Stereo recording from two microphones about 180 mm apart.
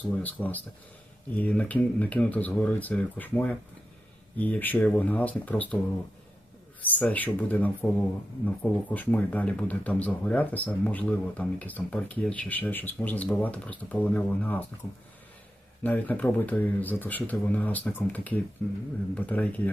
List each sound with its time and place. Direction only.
0.2 s speech: 10° left (ahead or behind)
6.8 s speech: 10° left (ahead or behind)
15.8 s speech: 10° left (ahead or behind)